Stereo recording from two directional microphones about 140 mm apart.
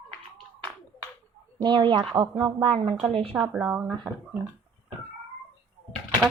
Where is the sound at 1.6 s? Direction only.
35° right (ahead or behind).